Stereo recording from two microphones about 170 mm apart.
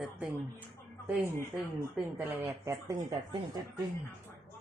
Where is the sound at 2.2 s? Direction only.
15° right (ahead or behind).